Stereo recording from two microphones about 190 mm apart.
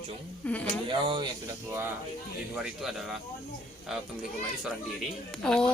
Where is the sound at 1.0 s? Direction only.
25° right (ahead or behind).